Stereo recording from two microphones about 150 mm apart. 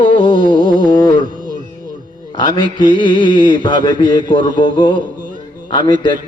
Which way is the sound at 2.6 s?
65° right (ahead or behind).